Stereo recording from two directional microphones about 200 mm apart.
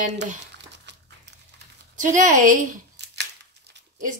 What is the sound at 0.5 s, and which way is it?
Crumpling, 60° right (ahead or behind).